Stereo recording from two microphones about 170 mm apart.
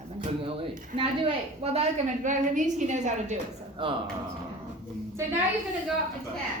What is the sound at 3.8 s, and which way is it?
Speech, 30° right (ahead or behind).